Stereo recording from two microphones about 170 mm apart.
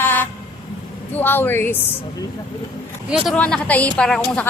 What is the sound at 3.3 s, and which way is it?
Speech, 5° left (ahead or behind).